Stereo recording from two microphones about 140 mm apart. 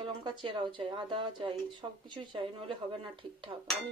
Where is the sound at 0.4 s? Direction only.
35° right (ahead or behind).